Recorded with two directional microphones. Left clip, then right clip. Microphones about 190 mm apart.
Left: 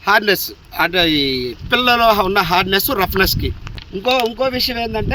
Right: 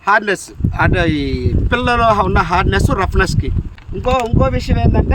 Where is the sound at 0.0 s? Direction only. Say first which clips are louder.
Even; 10° right (ahead or behind).